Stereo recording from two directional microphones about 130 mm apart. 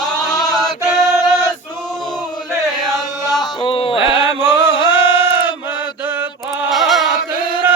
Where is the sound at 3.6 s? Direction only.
45° left (ahead or behind).